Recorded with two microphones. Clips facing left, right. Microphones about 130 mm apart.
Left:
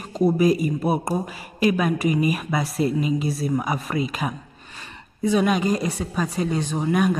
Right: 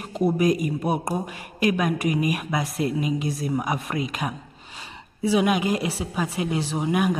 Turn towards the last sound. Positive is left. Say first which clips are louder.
# left 2 dB
turn(degrees=-10)  # may be behind; listen again after turning